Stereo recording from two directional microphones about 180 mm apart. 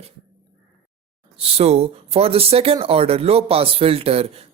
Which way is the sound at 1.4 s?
35° right (ahead or behind).